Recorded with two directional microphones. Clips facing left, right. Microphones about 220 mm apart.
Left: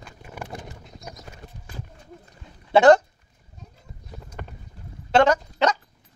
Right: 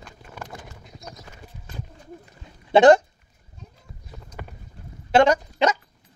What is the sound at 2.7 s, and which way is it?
Speech, 15° right (ahead or behind).